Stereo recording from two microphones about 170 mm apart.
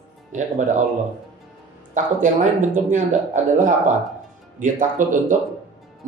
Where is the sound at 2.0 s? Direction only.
50° right (ahead or behind).